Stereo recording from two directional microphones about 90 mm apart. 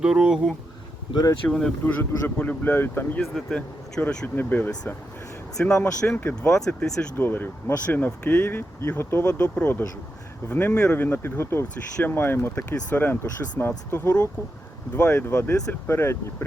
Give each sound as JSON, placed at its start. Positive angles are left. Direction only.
{"t": 0.0, "sound": "speech", "side_deg": -5}
{"t": 1.1, "sound": "speech", "side_deg": 50}
{"t": 1.5, "sound": "speech", "side_deg": 5}
{"t": 1.8, "sound": "speech", "side_deg": 20}
{"t": 3.3, "sound": "speech", "side_deg": 10}
{"t": 4.4, "sound": "speech", "side_deg": 20}
{"t": 5.8, "sound": "speech", "side_deg": 25}
{"t": 6.6, "sound": "speech", "side_deg": 10}
{"t": 7.2, "sound": "speech", "side_deg": 20}